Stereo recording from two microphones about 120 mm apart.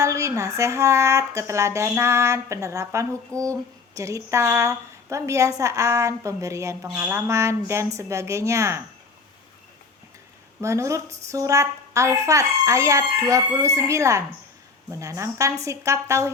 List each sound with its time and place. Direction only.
0.0 s speech: 25° right (ahead or behind)
10.6 s speech: 25° right (ahead or behind)